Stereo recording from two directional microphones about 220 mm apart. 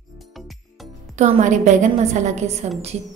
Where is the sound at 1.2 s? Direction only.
35° right (ahead or behind).